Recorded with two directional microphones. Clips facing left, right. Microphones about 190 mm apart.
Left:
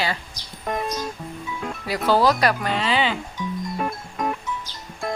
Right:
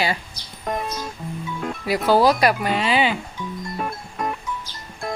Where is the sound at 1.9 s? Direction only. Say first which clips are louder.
Right 2 dB; 10° right (ahead or behind).